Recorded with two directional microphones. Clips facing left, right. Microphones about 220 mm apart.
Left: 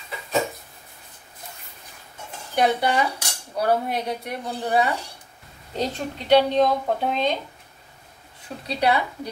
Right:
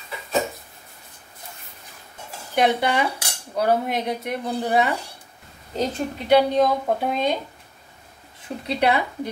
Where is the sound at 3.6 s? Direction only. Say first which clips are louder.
Right 1 dB; 20° right (ahead or behind).